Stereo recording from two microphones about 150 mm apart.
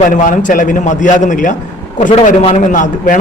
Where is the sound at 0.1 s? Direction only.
60° left (ahead or behind).